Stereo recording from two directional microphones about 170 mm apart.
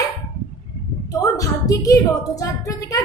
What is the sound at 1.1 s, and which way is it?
A woman's voice, 20° left (ahead or behind).